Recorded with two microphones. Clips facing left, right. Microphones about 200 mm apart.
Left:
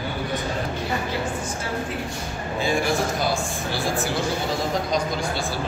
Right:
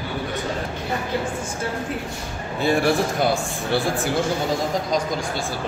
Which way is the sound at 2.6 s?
60° right (ahead or behind).